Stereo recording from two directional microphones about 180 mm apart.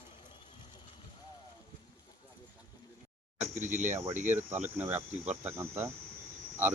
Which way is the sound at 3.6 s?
45° right (ahead or behind).